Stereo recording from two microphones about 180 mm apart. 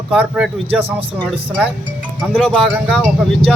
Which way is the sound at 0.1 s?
5° right (ahead or behind).